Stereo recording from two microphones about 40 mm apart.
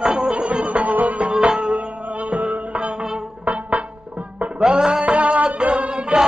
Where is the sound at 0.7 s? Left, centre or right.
Right.